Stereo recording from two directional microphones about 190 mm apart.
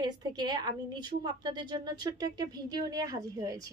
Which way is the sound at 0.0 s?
20° right (ahead or behind).